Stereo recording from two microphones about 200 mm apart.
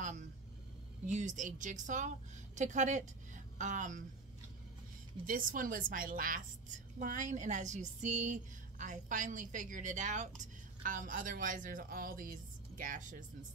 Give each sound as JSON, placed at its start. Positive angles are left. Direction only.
{"t": 1.0, "sound": "speech", "side_deg": -35}
{"t": 5.2, "sound": "speech", "side_deg": -45}